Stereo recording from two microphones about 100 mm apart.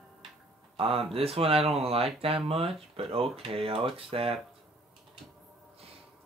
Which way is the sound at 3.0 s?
75° right (ahead or behind).